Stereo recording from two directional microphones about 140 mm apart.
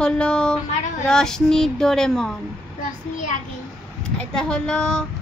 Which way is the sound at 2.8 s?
60° left (ahead or behind).